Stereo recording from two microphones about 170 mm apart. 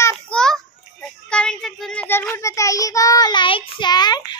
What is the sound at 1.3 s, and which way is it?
Child singing, 5° left (ahead or behind).